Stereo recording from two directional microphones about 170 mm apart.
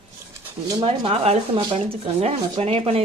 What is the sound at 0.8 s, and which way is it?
Speech, 35° right (ahead or behind).